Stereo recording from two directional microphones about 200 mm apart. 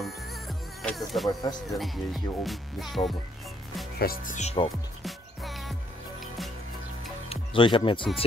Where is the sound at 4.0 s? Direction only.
45° left (ahead or behind).